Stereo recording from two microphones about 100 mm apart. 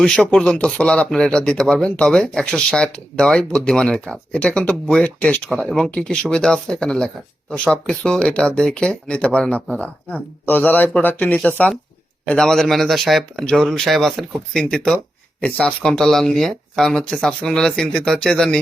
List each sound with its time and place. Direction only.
0.0 s a man's voice: 5° left (ahead or behind)